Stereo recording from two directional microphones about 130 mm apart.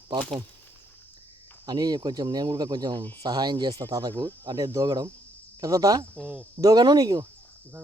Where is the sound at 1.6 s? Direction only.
30° right (ahead or behind).